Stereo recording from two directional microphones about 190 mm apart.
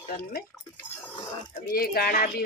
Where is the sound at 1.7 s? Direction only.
50° left (ahead or behind).